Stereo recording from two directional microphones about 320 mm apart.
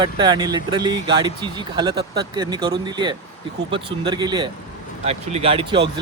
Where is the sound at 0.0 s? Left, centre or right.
Centre.